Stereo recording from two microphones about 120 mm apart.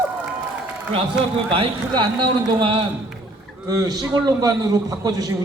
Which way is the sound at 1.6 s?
45° right (ahead or behind).